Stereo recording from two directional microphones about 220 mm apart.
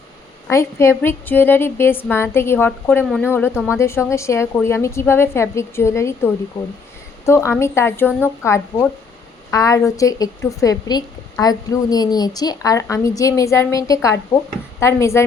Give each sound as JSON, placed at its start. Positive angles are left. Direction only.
{"t": 0.4, "sound": "a woman's voice", "side_deg": 15}